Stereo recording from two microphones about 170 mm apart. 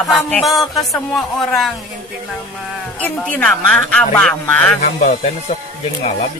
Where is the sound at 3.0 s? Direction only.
10° left (ahead or behind).